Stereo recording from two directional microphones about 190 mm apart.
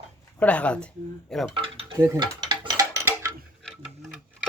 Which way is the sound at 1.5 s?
30° right (ahead or behind).